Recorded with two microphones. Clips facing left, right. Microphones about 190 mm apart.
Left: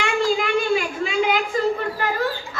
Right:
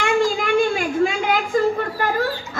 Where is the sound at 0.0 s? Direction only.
45° right (ahead or behind).